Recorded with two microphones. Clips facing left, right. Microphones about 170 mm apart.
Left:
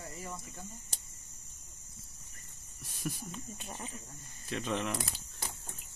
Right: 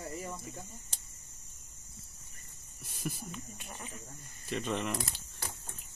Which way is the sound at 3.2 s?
30° left (ahead or behind).